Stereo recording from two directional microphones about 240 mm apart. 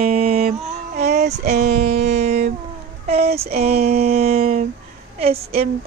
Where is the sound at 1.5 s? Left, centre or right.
Right.